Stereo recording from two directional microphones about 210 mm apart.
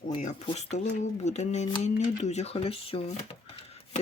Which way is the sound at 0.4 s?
35° left (ahead or behind).